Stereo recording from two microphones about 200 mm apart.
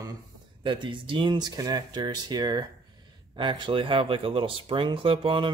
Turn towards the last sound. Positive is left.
turn(degrees=-25)  # may be behind; listen again after turning